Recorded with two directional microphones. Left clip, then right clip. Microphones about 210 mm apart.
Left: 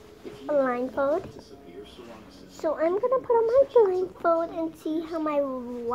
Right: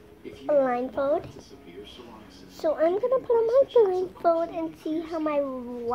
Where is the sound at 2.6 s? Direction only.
15° left (ahead or behind).